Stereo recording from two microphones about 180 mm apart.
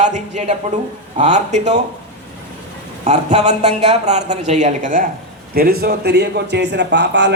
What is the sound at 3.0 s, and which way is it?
Speech, 40° right (ahead or behind).